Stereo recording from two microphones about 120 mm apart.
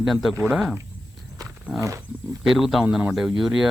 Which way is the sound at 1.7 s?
25° right (ahead or behind).